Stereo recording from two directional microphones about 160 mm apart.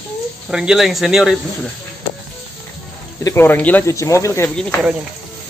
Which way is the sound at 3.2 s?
15° left (ahead or behind).